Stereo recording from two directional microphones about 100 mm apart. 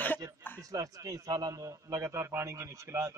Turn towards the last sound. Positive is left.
turn(degrees=-30)  # may be behind; listen again after turning